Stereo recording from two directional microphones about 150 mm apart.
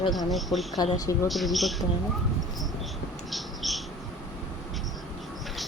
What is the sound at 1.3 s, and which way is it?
Speech, centre (ahead or behind).